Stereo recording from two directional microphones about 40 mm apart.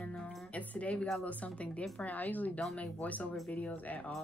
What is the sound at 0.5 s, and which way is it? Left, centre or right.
A woman's voice, left.